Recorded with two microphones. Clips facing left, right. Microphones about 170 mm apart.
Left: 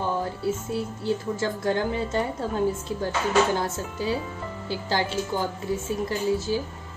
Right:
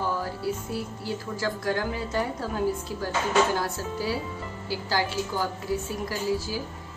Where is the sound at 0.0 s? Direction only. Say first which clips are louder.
Left 2 dB; 25° left (ahead or behind).